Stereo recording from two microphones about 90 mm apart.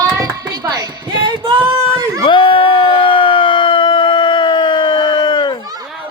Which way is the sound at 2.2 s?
70° left (ahead or behind).